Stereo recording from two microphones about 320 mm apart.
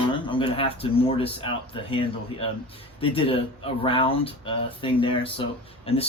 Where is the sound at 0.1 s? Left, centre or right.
Centre.